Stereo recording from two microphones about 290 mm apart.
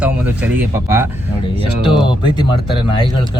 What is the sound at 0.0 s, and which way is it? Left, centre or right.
Speech, centre.